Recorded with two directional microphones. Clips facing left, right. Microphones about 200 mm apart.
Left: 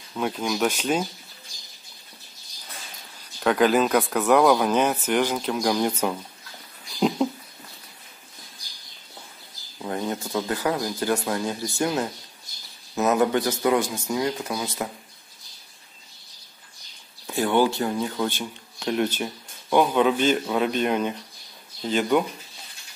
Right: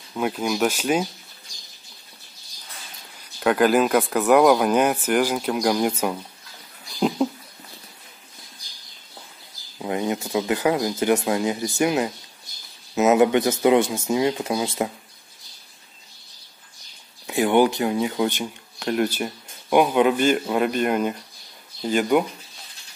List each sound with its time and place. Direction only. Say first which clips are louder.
0.1 s speech: right 2 dB; 5° right (ahead or behind)
3.3 s speech: right 2 dB; 5° right (ahead or behind)
7.0 s a sound: right 1 dB; centre (ahead or behind)
9.8 s speech: right 3 dB; 15° right (ahead or behind)
17.3 s speech: right 3 dB; 15° right (ahead or behind)